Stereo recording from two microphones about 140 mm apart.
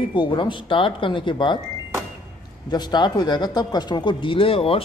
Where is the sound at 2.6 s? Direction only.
30° left (ahead or behind).